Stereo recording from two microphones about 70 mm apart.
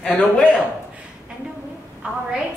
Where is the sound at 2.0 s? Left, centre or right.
Centre.